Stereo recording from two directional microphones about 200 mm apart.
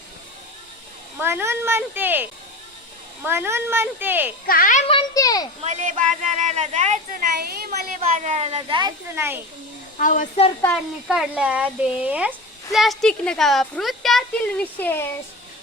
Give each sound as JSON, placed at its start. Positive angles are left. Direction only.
{"t": 1.2, "sound": "speech", "side_deg": -10}
{"t": 4.4, "sound": "a child's voice", "side_deg": 45}
{"t": 4.9, "sound": "a sound", "side_deg": 20}
{"t": 5.6, "sound": "speech", "side_deg": -35}
{"t": 9.1, "sound": "speech", "side_deg": -10}
{"t": 10.0, "sound": "a woman's voice", "side_deg": 40}
{"t": 11.1, "sound": "a woman's voice", "side_deg": -5}